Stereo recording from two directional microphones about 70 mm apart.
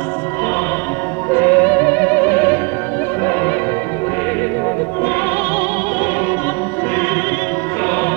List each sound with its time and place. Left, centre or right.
1.3 s music: left